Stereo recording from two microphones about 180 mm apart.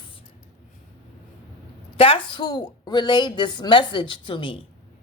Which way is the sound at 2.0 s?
30° left (ahead or behind).